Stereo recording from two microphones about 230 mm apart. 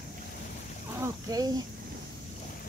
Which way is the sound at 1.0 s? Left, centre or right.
Centre.